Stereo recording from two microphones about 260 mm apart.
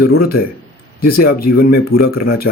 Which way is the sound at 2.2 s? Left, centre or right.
Left.